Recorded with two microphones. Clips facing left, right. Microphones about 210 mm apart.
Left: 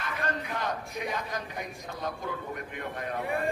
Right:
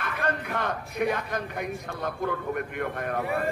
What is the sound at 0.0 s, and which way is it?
A man's voice, 55° right (ahead or behind).